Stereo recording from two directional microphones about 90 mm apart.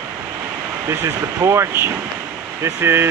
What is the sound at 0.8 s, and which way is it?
Speech, 30° right (ahead or behind).